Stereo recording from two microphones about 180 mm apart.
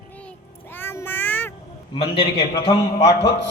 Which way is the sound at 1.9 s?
30° left (ahead or behind).